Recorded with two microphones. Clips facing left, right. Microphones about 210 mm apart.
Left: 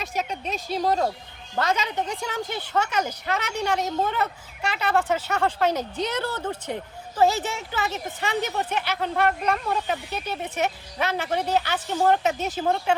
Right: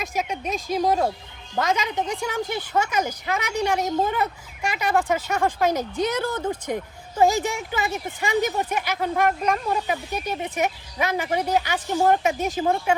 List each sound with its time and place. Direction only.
0.0 s speech: 10° right (ahead or behind)